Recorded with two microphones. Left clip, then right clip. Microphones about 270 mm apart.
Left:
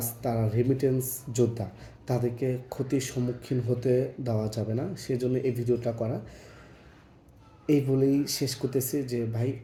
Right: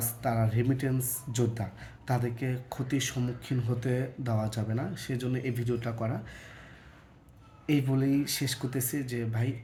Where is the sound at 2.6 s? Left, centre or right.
Right.